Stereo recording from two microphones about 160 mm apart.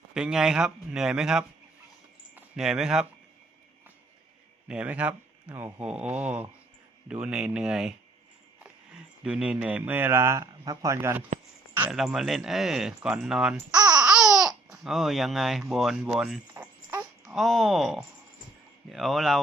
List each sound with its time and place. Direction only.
0.1 s speech: 5° right (ahead or behind)
4.7 s speech: 10° right (ahead or behind)
9.2 s speech: 5° right (ahead or behind)
11.7 s speech: 5° right (ahead or behind)
13.7 s babbling: 25° right (ahead or behind)
14.0 s speech: 5° right (ahead or behind)